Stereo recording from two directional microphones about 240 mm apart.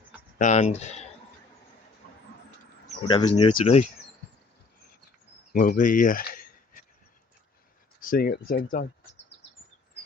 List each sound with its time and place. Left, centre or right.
0.3 s speech: left
3.1 s speech: left
5.5 s speech: left
8.0 s speech: left